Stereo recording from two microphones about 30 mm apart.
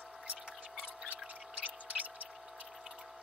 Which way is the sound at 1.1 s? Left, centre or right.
Right.